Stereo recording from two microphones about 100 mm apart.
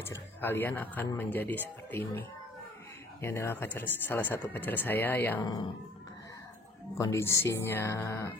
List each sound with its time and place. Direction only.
0.0 s speech: 25° left (ahead or behind)
5.4 s speech: 45° left (ahead or behind)
7.0 s speech: 30° left (ahead or behind)